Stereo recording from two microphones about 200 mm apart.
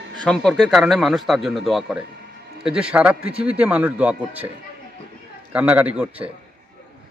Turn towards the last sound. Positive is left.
turn(degrees=-5)  # may be behind; listen again after turning